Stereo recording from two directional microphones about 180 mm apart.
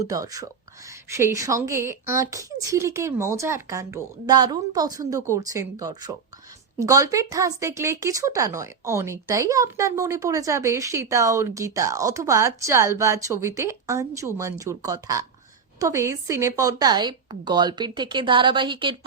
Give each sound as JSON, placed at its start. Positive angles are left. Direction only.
{"t": 0.0, "sound": "speech", "side_deg": -20}